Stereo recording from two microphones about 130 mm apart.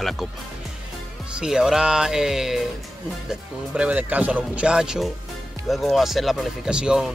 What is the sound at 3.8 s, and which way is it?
Speech, 10° right (ahead or behind).